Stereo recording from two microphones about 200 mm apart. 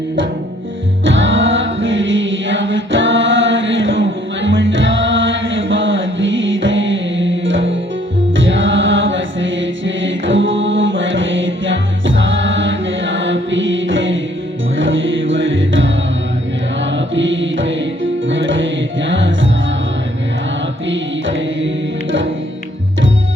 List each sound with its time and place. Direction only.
1.0 s chant: 70° right (ahead or behind)
8.4 s mantra: 70° right (ahead or behind)
14.8 s music: 70° right (ahead or behind)
20.8 s music: 65° right (ahead or behind)